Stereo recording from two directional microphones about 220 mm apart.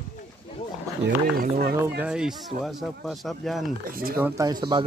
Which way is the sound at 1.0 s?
40° right (ahead or behind).